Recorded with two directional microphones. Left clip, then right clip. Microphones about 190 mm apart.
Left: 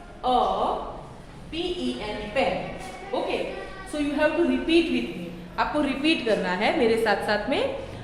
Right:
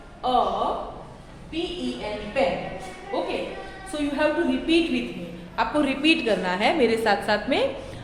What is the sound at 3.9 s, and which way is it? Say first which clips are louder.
Speech: even; 25° right (ahead or behind).